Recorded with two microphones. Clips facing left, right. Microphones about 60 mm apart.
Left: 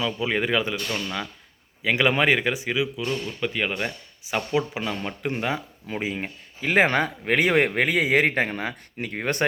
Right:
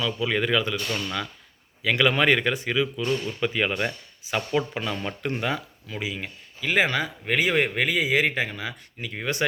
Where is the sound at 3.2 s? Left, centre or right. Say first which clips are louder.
Right 1 dB; centre.